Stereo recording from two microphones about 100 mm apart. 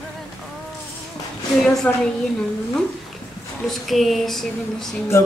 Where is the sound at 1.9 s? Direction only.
15° left (ahead or behind).